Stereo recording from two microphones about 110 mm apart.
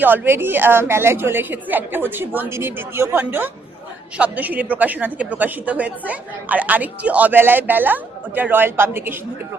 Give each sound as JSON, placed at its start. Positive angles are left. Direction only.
{"t": 0.0, "sound": "a woman's voice", "side_deg": -20}